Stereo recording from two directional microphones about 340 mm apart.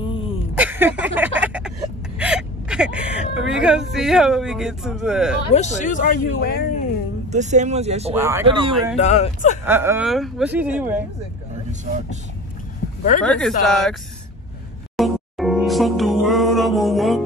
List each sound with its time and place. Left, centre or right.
0.0 s a sound: centre
0.6 s a sound: centre
2.1 s speech: centre
5.5 s speech: left
7.2 s speech: right
8.1 s speech: centre
8.9 s speech: centre
9.7 s speech: centre
13.2 s speech: centre
15.0 s music: centre